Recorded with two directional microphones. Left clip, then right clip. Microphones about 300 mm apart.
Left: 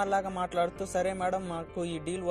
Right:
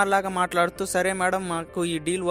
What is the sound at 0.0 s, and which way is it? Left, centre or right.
Speech, right.